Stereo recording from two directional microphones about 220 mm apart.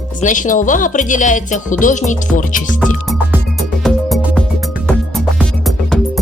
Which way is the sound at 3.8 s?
Centre (ahead or behind).